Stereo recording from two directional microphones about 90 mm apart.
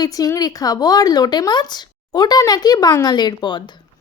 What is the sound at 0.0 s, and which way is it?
A woman's voice, 45° left (ahead or behind).